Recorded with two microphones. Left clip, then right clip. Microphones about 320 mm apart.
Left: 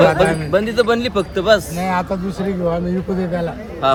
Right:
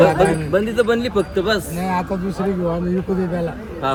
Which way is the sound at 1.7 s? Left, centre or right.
Centre.